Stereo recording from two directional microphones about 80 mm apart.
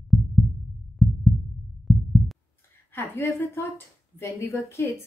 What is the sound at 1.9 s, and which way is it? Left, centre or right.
Pulse, centre.